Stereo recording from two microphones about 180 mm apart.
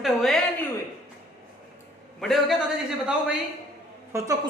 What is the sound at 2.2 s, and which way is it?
Speech, centre (ahead or behind).